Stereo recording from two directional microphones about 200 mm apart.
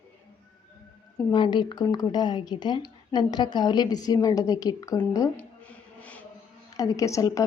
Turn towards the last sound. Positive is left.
turn(degrees=15)  # may be behind; listen again after turning